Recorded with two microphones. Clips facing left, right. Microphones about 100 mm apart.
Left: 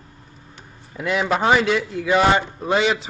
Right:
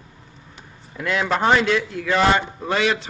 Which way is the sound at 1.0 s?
5° left (ahead or behind).